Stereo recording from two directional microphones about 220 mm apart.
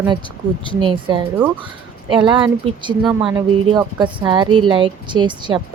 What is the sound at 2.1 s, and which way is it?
Speech, 20° right (ahead or behind).